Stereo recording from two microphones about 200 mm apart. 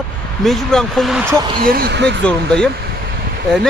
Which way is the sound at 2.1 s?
5° left (ahead or behind).